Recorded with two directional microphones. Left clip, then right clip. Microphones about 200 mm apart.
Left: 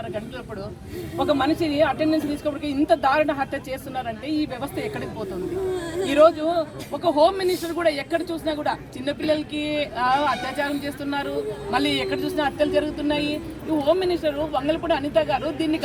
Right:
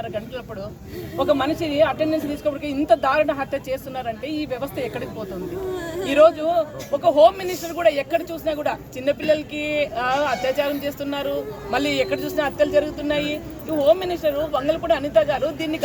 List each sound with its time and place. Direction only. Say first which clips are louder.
1.2 s speech: right 1 dB; 10° right (ahead or behind)
6.1 s speech: right 2 dB; 10° right (ahead or behind)
11.7 s speech: right 2 dB; 15° right (ahead or behind)